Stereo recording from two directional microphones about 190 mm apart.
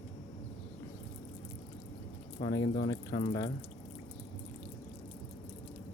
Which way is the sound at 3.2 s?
90° left.